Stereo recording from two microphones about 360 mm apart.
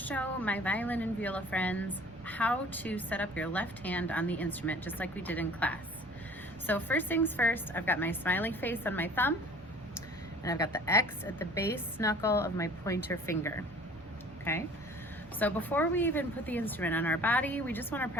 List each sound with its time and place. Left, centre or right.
0.0 s speech: centre
10.4 s a woman's voice: centre